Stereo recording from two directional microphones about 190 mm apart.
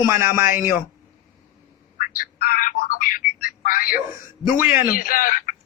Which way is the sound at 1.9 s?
45° left (ahead or behind).